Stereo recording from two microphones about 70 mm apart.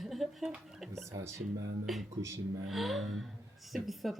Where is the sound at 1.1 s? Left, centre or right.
Right.